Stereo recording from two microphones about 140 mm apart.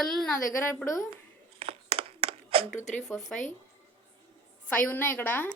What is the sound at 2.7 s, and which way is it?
Speech, 60° left (ahead or behind).